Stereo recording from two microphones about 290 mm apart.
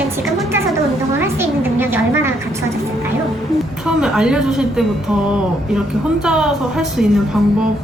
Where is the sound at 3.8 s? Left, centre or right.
Centre.